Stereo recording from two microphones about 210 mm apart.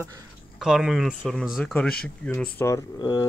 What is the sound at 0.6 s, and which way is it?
Speech, centre (ahead or behind).